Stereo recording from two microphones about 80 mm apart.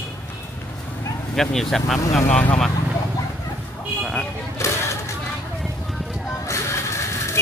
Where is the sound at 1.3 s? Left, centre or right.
Centre.